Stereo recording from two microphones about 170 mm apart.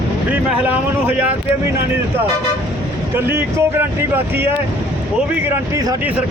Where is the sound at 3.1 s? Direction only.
15° right (ahead or behind).